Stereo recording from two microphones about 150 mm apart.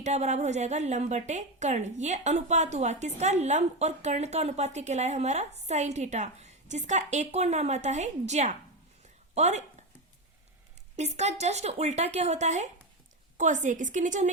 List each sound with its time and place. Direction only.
0.0 s a woman's voice: 50° right (ahead or behind)
10.9 s a woman's voice: 50° right (ahead or behind)